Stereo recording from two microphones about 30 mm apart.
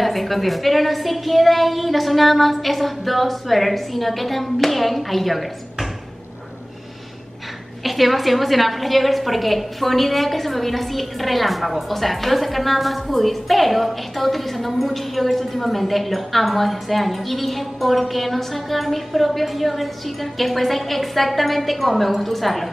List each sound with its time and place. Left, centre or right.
0.0 s a woman's voice: centre
7.8 s a woman's voice: centre